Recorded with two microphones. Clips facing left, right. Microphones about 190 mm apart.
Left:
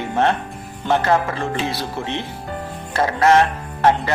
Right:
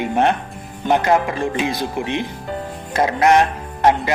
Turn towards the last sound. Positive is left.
turn(degrees=-15)  # may be behind; listen again after turning